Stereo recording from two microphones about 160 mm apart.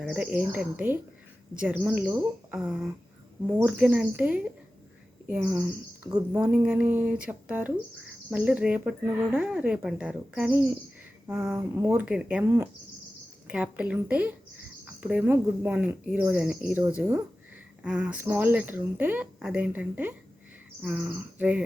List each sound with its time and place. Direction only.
0.0 s speech: 5° right (ahead or behind)
5.5 s speech: 15° right (ahead or behind)
6.3 s speech: 5° right (ahead or behind)
11.5 s speech: 20° right (ahead or behind)
12.0 s speech: 5° right (ahead or behind)
13.5 s speech: 5° right (ahead or behind)